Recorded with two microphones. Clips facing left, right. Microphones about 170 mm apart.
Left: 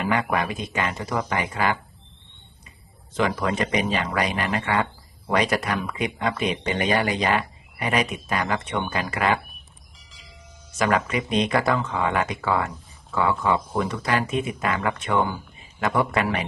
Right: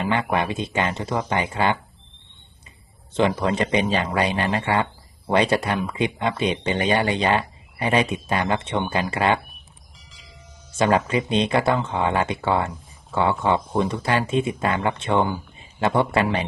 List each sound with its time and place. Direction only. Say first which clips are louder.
0.1 s speech: right 1 dB; 25° right (ahead or behind)
3.2 s speech: right 3 dB; 30° right (ahead or behind)
10.0 s vehicle: even; centre (ahead or behind)
10.8 s speech: right 3 dB; 30° right (ahead or behind)